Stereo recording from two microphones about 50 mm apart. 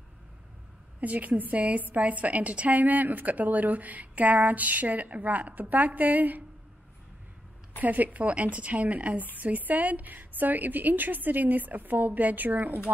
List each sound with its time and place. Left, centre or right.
1.0 s a woman's voice: right
7.8 s a woman's voice: right